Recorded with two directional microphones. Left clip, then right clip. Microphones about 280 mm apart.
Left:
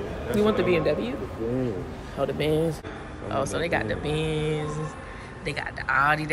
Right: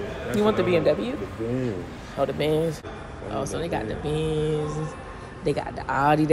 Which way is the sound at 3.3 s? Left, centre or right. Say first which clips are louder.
Left 2 dB; centre.